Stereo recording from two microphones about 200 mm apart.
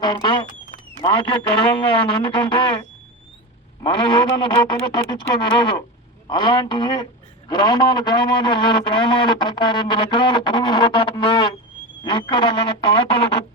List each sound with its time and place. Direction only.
0.0 s a man's voice: 20° left (ahead or behind)
3.8 s a man's voice: 25° left (ahead or behind)